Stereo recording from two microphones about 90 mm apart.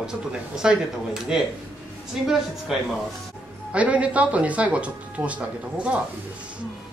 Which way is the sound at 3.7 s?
15° right (ahead or behind).